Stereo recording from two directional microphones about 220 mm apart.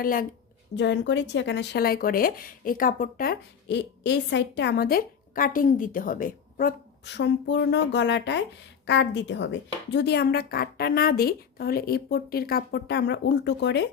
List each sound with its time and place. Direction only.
0.0 s a woman's voice: 40° left (ahead or behind)
0.8 s speech: 55° left (ahead or behind)